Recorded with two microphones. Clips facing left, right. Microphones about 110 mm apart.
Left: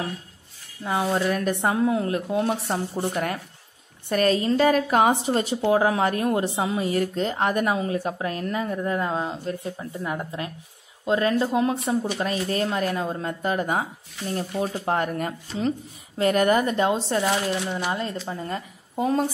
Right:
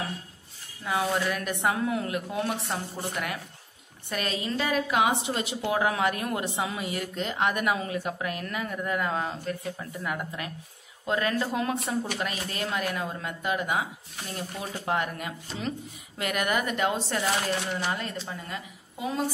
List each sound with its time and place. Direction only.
0.8 s a woman's voice: 30° left (ahead or behind)
12.2 s a woman's voice: 35° left (ahead or behind)
14.9 s a woman's voice: 40° left (ahead or behind); by 17.8 s 25° left (ahead or behind)
18.3 s a woman's voice: 35° left (ahead or behind)